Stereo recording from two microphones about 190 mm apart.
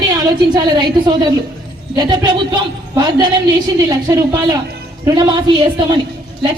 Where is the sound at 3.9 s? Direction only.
20° right (ahead or behind).